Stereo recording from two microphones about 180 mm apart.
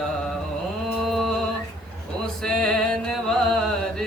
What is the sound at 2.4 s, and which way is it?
Music, 5° left (ahead or behind).